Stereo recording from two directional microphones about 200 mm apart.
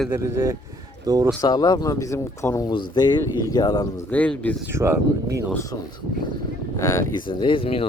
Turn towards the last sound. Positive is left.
turn(degrees=25)  # may be behind; listen again after turning